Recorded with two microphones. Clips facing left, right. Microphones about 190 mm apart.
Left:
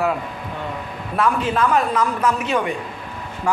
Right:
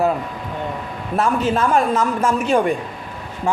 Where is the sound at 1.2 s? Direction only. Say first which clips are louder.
Right 1 dB; 45° right (ahead or behind).